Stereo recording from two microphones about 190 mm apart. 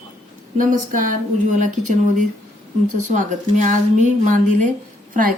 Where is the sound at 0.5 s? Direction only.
45° right (ahead or behind).